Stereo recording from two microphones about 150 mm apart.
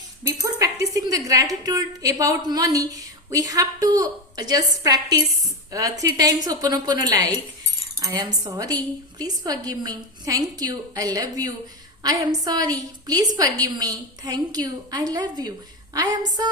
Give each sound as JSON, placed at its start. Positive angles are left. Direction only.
{"t": 0.3, "sound": "speech", "side_deg": -20}